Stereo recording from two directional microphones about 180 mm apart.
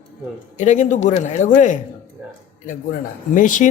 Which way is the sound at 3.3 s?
45° left (ahead or behind).